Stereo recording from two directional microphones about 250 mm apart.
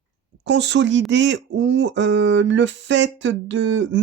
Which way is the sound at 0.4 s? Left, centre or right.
Right.